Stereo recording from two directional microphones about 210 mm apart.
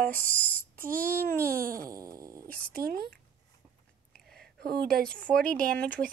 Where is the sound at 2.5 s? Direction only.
5° left (ahead or behind).